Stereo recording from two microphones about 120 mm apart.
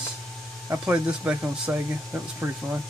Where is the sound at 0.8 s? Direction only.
10° right (ahead or behind).